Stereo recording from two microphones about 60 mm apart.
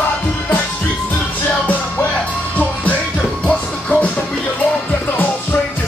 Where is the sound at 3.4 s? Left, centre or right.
Centre.